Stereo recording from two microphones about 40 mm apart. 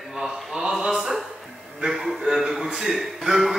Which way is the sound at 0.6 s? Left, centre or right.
Centre.